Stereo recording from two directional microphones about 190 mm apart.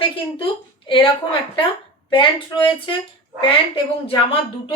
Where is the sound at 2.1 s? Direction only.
25° left (ahead or behind).